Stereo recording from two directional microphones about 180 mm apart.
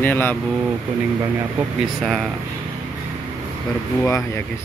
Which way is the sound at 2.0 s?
Centre (ahead or behind).